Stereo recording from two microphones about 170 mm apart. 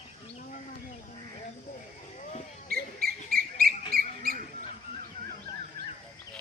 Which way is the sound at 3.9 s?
60° right (ahead or behind).